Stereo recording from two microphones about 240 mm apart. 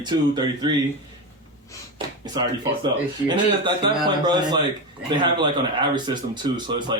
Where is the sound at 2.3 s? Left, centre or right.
Centre.